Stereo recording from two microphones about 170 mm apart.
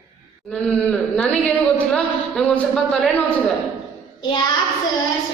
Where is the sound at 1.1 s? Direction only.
5° left (ahead or behind).